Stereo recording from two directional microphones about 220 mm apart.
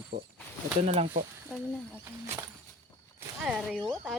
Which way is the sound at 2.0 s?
10° right (ahead or behind).